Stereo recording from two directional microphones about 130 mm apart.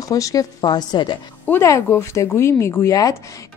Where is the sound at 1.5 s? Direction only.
25° left (ahead or behind).